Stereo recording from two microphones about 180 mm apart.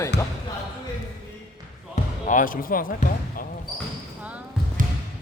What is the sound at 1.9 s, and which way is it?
Speech, 45° left (ahead or behind).